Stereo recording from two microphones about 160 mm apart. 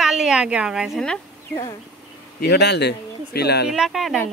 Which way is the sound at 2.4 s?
90° left.